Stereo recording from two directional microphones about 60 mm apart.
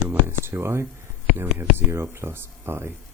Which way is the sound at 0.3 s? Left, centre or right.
Right.